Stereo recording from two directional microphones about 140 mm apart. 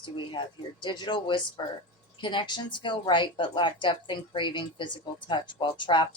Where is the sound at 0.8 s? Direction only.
35° left (ahead or behind).